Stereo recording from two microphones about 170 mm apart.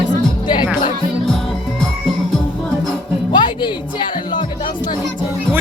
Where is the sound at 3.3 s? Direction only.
25° left (ahead or behind).